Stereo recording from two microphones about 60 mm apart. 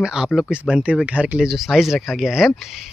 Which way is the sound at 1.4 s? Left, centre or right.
Centre.